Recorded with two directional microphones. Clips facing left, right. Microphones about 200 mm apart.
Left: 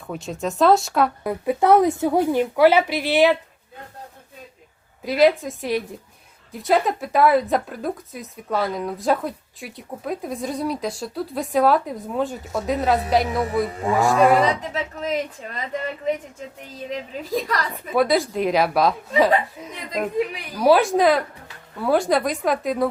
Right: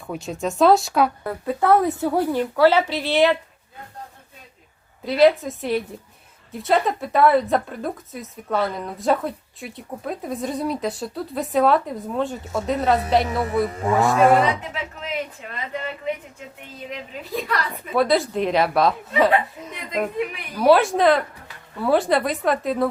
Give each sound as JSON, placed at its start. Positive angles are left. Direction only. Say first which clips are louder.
{"t": 0.1, "sound": "speech", "louder": "right 1 dB", "side_deg": 0}
{"t": 1.2, "sound": "a woman's voice", "louder": "left 2 dB", "side_deg": 15}
{"t": 5.0, "sound": "speech", "louder": "right 1 dB", "side_deg": 0}
{"t": 14.7, "sound": "a woman's voice", "louder": "left 5 dB", "side_deg": 40}
{"t": 17.9, "sound": "speech", "louder": "even", "side_deg": 0}